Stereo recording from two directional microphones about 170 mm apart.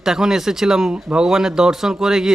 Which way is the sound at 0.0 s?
5° right (ahead or behind).